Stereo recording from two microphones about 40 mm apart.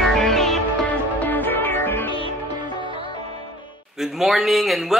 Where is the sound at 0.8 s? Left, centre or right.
Left.